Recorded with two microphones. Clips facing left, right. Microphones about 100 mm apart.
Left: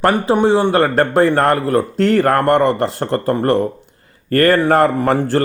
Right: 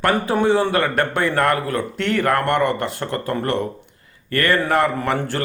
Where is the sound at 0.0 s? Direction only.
20° left (ahead or behind).